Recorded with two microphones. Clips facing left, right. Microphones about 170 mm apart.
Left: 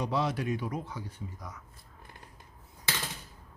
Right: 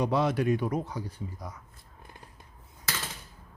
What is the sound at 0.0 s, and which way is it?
Speech, 55° right (ahead or behind).